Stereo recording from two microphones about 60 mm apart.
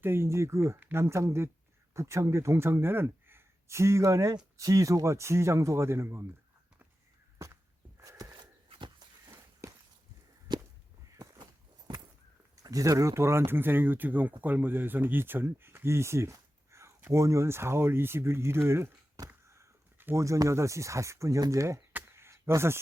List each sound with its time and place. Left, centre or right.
0.0 s speech: right
7.3 s walk: right
9.6 s walk: right
12.6 s speech: right
13.1 s speech: right
20.1 s speech: right
22.1 s a sound: right